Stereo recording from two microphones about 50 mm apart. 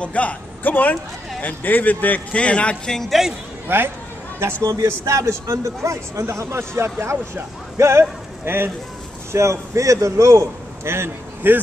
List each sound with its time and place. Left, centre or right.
0.0 s a man's voice: left
2.9 s speech: centre
3.6 s speech: right
4.8 s speech: right
8.0 s speech: right
9.3 s a man's voice: right
11.4 s speech: right